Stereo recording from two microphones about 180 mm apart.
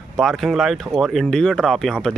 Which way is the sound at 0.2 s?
Centre (ahead or behind).